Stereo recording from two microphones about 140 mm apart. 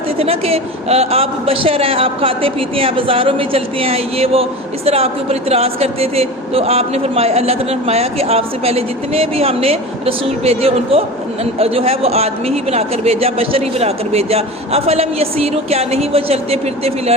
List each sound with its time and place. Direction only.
0.2 s speech: 45° right (ahead or behind)